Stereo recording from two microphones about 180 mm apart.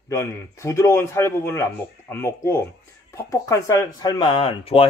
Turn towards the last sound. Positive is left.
turn(degrees=30)  # may be behind; listen again after turning